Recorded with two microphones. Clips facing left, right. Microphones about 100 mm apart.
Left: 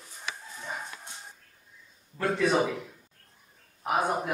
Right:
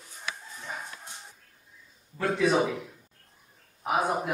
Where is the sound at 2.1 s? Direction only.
Centre (ahead or behind).